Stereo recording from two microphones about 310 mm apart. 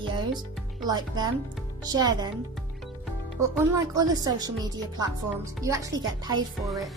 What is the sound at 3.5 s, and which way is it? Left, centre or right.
Speech, centre.